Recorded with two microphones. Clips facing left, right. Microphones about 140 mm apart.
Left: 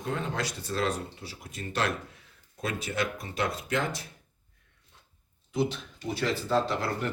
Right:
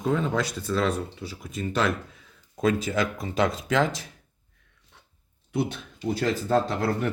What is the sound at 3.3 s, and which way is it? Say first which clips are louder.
Speech: right 7 dB; 90° right.